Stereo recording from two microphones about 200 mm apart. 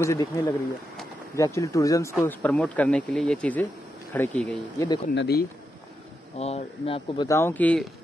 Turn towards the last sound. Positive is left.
turn(degrees=5)  # may be behind; listen again after turning